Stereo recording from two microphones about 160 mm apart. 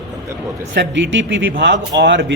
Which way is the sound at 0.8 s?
90° right.